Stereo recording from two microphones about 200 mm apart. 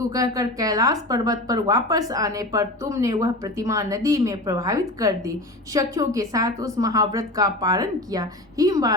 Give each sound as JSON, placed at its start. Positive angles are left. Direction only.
{"t": 0.0, "sound": "speech", "side_deg": -15}